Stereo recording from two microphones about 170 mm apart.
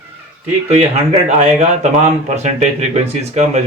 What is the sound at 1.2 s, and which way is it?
Speech, 40° right (ahead or behind).